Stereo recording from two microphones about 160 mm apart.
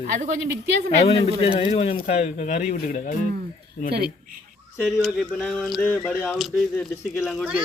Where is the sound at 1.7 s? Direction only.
40° left (ahead or behind).